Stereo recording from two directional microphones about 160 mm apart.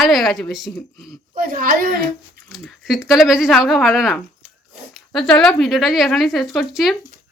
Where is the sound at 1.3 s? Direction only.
60° right (ahead or behind).